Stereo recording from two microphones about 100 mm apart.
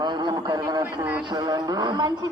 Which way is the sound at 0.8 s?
20° right (ahead or behind).